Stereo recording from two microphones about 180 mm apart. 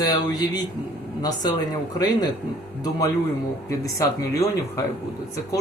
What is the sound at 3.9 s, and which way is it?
Speech, 20° left (ahead or behind).